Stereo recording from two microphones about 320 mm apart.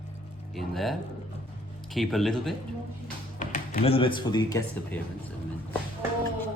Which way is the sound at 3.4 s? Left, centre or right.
Left.